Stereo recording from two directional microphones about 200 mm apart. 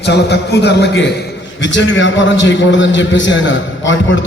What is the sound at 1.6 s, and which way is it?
A man's voice, 65° left (ahead or behind).